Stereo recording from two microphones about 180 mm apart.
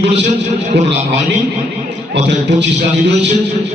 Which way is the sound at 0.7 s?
75° right (ahead or behind).